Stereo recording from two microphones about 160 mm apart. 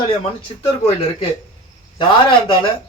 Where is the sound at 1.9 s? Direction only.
30° left (ahead or behind).